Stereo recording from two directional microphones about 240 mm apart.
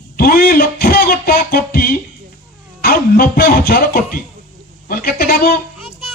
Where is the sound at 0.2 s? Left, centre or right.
Left.